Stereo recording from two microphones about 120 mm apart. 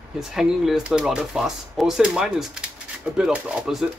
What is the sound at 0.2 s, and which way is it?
Speech, 5° right (ahead or behind).